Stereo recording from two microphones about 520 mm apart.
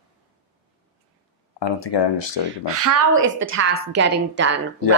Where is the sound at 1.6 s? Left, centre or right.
Left.